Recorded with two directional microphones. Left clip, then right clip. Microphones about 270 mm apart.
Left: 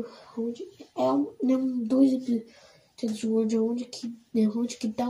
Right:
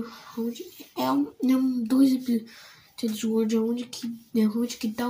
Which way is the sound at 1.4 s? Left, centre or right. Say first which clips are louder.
Right 2 dB; centre.